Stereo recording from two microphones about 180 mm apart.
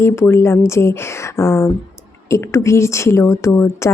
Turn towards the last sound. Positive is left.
turn(degrees=15)  # may be behind; listen again after turning